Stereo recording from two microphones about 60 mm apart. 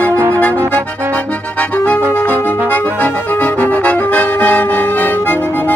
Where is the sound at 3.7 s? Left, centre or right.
Left.